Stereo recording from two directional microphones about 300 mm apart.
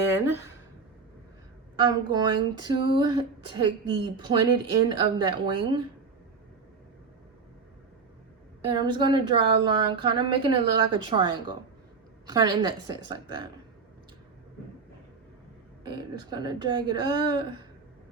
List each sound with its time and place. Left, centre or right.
0.1 s speech: centre
1.8 s speech: centre
8.6 s speech: centre
15.8 s speech: centre